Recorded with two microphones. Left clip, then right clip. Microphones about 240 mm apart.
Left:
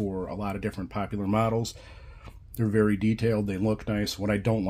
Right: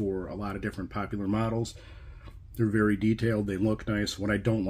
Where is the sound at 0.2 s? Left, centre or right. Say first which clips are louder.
Left 3 dB; left.